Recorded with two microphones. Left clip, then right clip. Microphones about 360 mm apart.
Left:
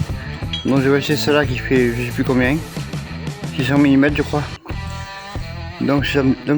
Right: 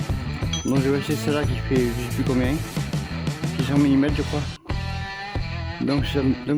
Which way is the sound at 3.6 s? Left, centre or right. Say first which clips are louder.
Left 6 dB; right.